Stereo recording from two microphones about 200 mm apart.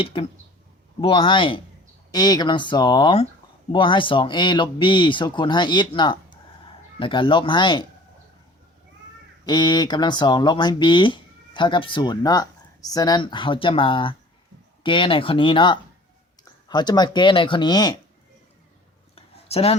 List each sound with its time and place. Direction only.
0.0 s speech: 25° left (ahead or behind)
9.4 s speech: 20° left (ahead or behind)
19.1 s a sound: 30° left (ahead or behind)